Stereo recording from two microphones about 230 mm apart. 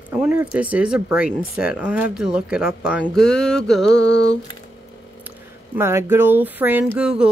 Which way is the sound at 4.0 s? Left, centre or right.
Left.